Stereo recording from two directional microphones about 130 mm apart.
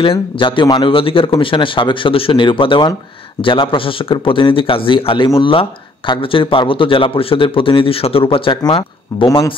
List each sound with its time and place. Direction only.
0.0 s speech: 40° left (ahead or behind)